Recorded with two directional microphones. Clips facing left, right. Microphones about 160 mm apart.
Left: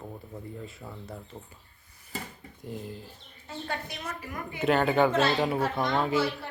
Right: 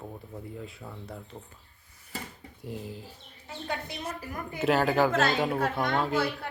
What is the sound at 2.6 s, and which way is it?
Speech, 5° right (ahead or behind).